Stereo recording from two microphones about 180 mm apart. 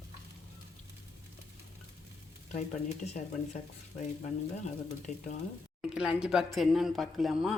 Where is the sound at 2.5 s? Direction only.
40° left (ahead or behind).